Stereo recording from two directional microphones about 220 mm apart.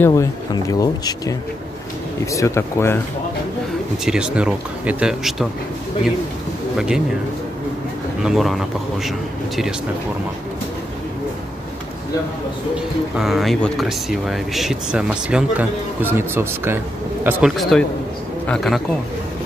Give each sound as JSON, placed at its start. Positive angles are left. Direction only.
{"t": 0.0, "sound": "speech", "side_deg": 15}
{"t": 2.3, "sound": "speech", "side_deg": 15}
{"t": 4.0, "sound": "speech", "side_deg": -5}
{"t": 8.2, "sound": "speech", "side_deg": 0}
{"t": 12.7, "sound": "speech", "side_deg": 0}